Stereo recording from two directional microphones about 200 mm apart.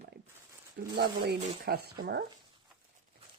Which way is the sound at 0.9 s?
55° right (ahead or behind).